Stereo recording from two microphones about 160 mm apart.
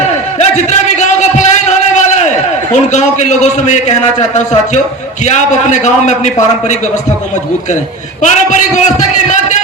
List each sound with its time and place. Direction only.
0.3 s a sound: 45° left (ahead or behind)
2.7 s a man's voice: 45° left (ahead or behind)
8.2 s a man's voice: 50° left (ahead or behind)